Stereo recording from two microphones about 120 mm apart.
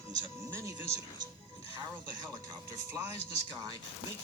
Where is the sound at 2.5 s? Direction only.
30° right (ahead or behind).